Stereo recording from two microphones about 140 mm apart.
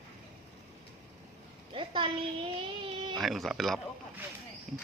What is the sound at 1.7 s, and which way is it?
Speech, 40° right (ahead or behind).